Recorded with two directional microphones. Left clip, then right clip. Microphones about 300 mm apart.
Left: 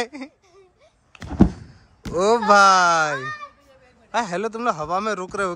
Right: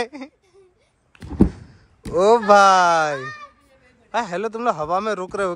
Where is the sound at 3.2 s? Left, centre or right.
Left.